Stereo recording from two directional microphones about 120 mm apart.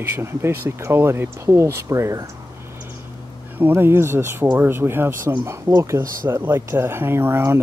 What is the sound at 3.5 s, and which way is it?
Speech, 20° right (ahead or behind).